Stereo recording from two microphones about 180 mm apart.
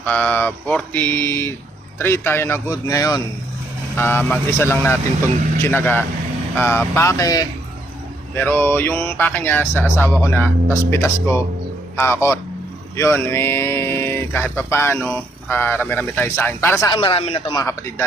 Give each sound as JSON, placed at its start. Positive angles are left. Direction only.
{"t": 0.0, "sound": "speech", "side_deg": 10}
{"t": 17.0, "sound": "a man's voice", "side_deg": 30}